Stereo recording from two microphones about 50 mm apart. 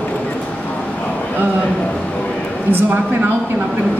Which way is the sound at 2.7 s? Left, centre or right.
Right.